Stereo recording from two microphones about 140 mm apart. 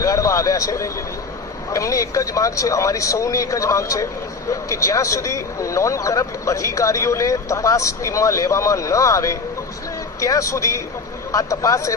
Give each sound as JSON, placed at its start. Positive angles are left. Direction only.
{"t": 0.0, "sound": "vehicle", "side_deg": 25}
{"t": 1.7, "sound": "speech", "side_deg": 25}